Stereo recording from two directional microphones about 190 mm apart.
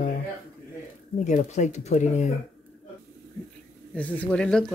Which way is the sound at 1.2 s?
40° left (ahead or behind).